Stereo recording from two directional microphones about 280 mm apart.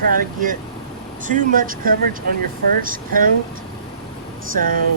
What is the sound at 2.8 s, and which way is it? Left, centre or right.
Speech, right.